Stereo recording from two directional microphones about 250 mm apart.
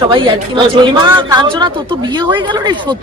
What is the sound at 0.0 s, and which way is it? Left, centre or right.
Speech, centre.